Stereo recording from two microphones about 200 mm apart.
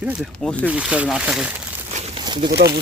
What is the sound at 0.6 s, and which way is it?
Speech, 5° right (ahead or behind).